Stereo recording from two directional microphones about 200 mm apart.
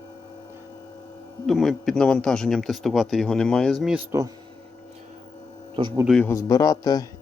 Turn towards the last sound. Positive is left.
turn(degrees=20)  # may be behind; listen again after turning